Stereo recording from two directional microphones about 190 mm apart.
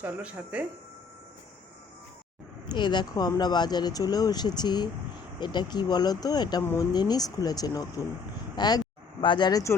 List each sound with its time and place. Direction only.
0.0 s speech: 5° right (ahead or behind)
2.6 s speech: 25° left (ahead or behind)